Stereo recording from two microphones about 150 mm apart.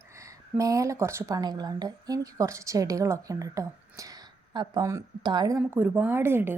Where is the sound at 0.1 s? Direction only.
20° right (ahead or behind).